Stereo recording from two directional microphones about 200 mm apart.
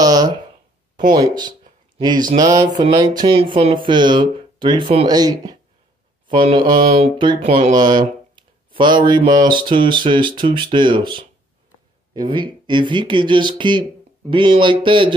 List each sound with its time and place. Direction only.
0.0 s a sound: 20° right (ahead or behind)
1.1 s speech: 20° right (ahead or behind)
2.3 s mantra: 15° right (ahead or behind)
2.9 s speech: 20° right (ahead or behind)